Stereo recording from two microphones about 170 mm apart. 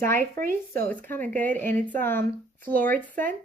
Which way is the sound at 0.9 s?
10° left (ahead or behind).